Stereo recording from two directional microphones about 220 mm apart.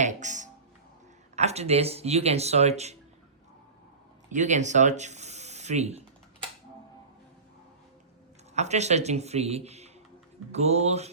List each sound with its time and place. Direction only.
0.0 s music: 35° right (ahead or behind)
1.4 s speech: 30° right (ahead or behind)
4.3 s speech: 35° right (ahead or behind)
8.5 s speech: 30° right (ahead or behind)